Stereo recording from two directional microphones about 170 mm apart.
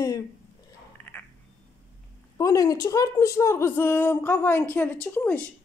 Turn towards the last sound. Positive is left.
turn(degrees=10)  # may be behind; listen again after turning